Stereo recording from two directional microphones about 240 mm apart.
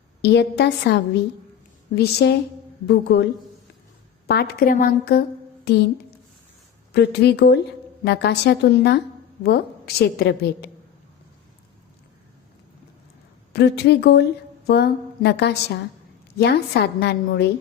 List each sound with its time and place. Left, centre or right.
0.2 s a woman's voice: left
4.3 s a woman's voice: left
13.5 s a woman's voice: left